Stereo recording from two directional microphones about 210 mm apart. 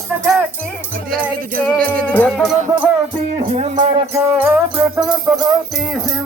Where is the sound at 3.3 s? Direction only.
30° right (ahead or behind).